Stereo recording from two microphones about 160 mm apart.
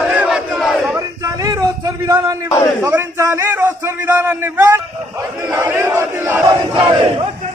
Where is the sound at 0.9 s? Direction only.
20° right (ahead or behind).